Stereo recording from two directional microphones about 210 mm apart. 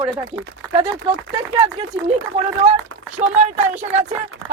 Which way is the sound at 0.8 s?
25° right (ahead or behind).